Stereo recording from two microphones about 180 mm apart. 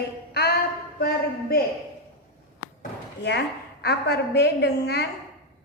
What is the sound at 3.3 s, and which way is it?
A woman's voice, 70° left (ahead or behind).